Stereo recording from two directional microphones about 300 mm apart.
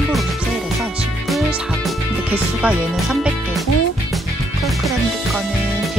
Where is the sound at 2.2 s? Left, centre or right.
Centre.